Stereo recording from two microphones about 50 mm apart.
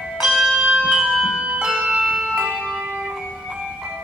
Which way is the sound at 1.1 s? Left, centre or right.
Centre.